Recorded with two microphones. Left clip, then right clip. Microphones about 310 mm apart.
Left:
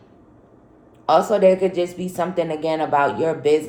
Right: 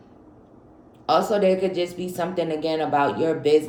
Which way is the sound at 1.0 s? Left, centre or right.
Centre.